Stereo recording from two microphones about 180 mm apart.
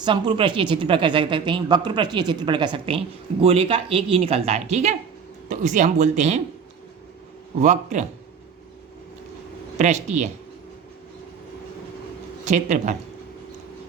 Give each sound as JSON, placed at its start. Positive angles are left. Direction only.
{"t": 0.0, "sound": "a woman's voice", "side_deg": -25}
{"t": 7.6, "sound": "a woman's voice", "side_deg": -40}
{"t": 9.7, "sound": "a woman's voice", "side_deg": -40}
{"t": 12.5, "sound": "a woman's voice", "side_deg": -40}